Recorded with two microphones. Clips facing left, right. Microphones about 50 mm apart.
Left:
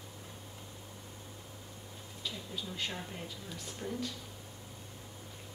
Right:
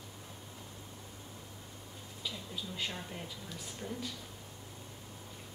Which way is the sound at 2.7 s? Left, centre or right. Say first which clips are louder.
Even; centre.